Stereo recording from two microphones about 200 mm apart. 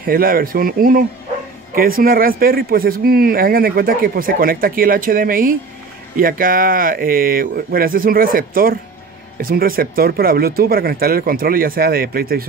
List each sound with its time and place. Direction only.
0.0 s speech: 45° right (ahead or behind)